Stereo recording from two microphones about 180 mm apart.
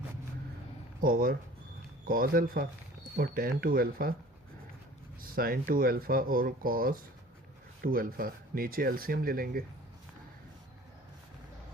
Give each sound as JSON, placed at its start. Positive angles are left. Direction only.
{"t": 1.0, "sound": "speech", "side_deg": -55}
{"t": 5.2, "sound": "speech", "side_deg": -55}